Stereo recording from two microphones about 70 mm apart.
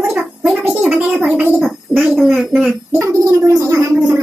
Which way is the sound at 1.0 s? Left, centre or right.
Centre.